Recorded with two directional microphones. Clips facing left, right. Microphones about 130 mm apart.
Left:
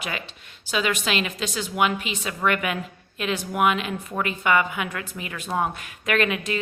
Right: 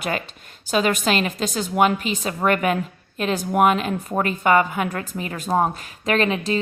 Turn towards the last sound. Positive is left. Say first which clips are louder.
# right 3 dB
turn(degrees=-30)  # may be behind; listen again after turning